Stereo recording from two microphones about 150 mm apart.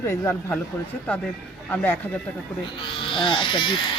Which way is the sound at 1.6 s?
10° left (ahead or behind).